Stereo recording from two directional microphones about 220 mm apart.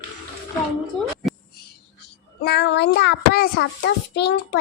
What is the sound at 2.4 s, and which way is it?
A child's voice, 50° left (ahead or behind).